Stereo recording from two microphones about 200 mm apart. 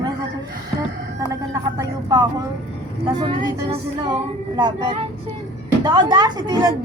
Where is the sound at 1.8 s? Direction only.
20° right (ahead or behind).